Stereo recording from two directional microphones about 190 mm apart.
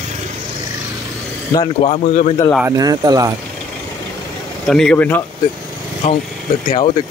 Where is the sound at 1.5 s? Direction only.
30° left (ahead or behind).